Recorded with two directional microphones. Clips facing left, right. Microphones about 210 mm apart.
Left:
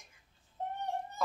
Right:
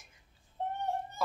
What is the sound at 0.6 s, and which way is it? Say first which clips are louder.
Baby cry: right 3 dB; 30° right (ahead or behind).